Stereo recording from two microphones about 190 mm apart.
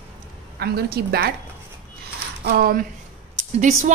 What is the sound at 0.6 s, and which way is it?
Speech, 55° right (ahead or behind).